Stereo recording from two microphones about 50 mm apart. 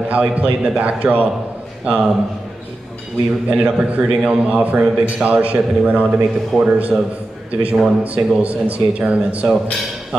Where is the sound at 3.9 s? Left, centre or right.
Right.